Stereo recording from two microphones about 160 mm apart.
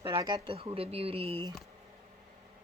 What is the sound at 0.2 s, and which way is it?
Speech, 25° right (ahead or behind).